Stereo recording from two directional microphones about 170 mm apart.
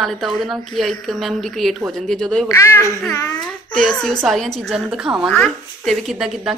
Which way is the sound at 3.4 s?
5° left (ahead or behind).